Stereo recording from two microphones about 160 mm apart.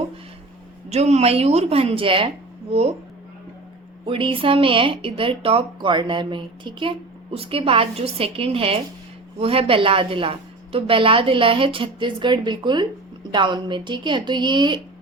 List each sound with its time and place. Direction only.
0.9 s a woman's voice: 45° right (ahead or behind)
4.0 s a woman's voice: 35° right (ahead or behind)